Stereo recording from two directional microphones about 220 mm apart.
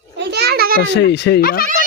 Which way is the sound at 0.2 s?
50° right (ahead or behind).